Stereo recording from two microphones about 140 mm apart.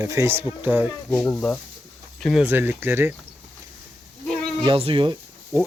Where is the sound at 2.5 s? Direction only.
15° right (ahead or behind).